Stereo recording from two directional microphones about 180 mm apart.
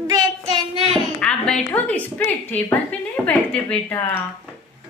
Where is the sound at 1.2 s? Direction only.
5° left (ahead or behind).